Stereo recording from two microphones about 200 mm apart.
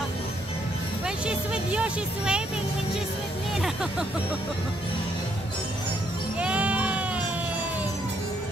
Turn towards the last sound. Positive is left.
turn(degrees=-5)  # may be behind; listen again after turning